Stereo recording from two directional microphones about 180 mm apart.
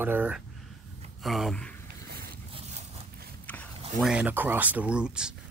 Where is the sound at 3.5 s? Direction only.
5° left (ahead or behind).